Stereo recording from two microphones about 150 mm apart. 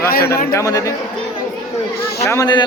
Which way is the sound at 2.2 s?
20° left (ahead or behind).